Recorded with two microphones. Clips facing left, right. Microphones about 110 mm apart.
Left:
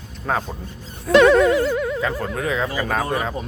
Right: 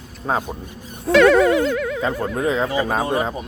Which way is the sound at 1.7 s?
10° left (ahead or behind).